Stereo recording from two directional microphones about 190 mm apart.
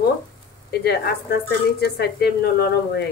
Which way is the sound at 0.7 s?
55° left (ahead or behind).